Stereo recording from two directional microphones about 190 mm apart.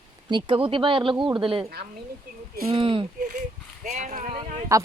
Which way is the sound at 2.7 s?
25° right (ahead or behind).